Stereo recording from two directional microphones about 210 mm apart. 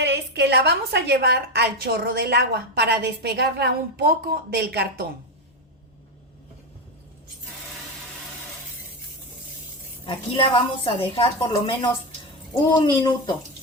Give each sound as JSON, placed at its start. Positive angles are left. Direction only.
{"t": 0.0, "sound": "a woman's voice", "side_deg": -55}
{"t": 10.1, "sound": "a woman's voice", "side_deg": 25}